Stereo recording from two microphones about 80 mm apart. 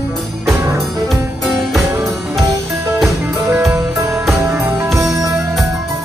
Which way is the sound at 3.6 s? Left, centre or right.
Right.